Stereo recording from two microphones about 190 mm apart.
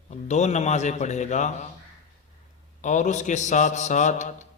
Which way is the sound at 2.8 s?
40° left (ahead or behind).